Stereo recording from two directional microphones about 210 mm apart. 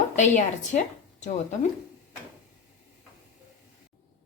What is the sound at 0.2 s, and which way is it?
A woman's voice, 35° left (ahead or behind).